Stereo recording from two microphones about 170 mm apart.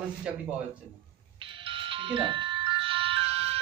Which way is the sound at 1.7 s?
30° right (ahead or behind).